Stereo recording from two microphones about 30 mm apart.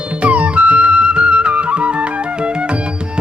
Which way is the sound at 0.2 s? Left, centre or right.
Right.